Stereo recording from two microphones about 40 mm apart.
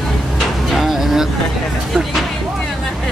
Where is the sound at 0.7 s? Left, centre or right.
Centre.